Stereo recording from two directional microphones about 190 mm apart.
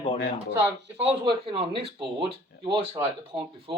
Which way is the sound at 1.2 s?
30° right (ahead or behind).